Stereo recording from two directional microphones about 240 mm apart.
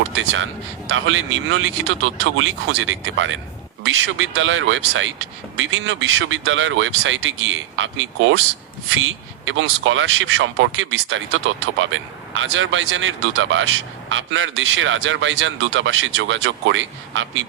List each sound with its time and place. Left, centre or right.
0.2 s speech: right